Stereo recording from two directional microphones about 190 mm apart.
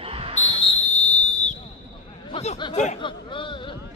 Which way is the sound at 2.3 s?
30° left (ahead or behind).